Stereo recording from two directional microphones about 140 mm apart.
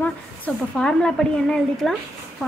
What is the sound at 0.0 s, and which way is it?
A woman's voice, 5° left (ahead or behind).